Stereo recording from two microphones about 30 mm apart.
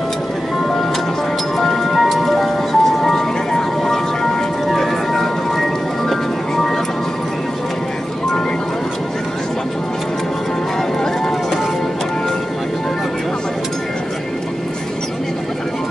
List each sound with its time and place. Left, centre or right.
1.6 s music: centre